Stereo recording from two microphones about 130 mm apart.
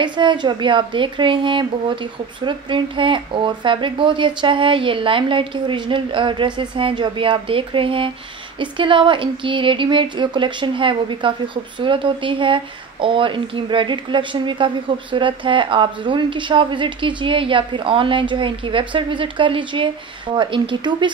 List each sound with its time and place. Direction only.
0.0 s speech: 35° right (ahead or behind)